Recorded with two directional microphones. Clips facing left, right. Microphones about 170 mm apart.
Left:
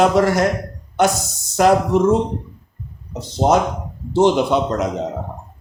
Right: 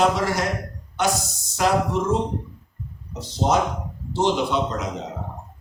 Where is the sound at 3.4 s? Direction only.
65° left (ahead or behind).